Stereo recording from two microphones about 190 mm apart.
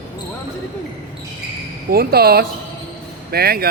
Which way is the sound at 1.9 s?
55° right (ahead or behind).